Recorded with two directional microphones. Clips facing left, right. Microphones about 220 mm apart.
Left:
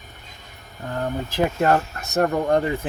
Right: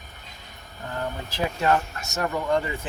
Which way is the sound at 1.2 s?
50° left (ahead or behind).